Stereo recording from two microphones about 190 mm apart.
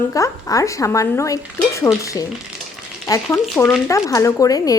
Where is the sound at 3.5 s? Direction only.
10° left (ahead or behind).